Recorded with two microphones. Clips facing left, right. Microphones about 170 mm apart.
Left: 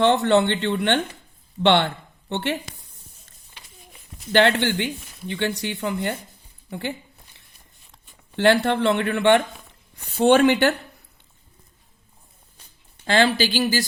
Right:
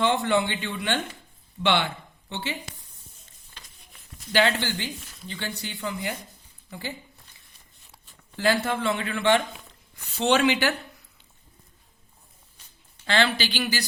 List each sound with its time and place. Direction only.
0.0 s speech: 70° left (ahead or behind)
3.6 s a sound: 10° left (ahead or behind)
4.3 s a woman's voice: 60° left (ahead or behind)
8.4 s a woman's voice: 70° left (ahead or behind)
13.1 s a woman's voice: 50° left (ahead or behind)